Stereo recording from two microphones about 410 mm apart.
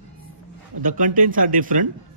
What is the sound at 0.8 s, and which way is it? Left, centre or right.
Speech, centre.